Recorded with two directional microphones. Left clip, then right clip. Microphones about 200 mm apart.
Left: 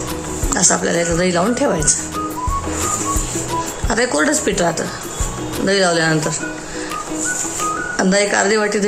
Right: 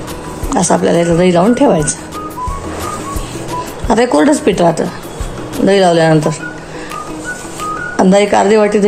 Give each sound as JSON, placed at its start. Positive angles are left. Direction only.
{"t": 0.5, "sound": "speech", "side_deg": -20}
{"t": 3.8, "sound": "speech", "side_deg": -20}
{"t": 7.9, "sound": "speech", "side_deg": -20}